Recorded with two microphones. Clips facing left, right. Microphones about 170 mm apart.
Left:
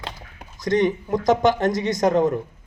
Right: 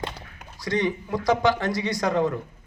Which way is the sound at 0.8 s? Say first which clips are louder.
Left 5 dB; 20° left (ahead or behind).